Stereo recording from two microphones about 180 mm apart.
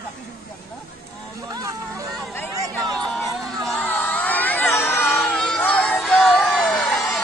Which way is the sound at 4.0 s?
10° left (ahead or behind).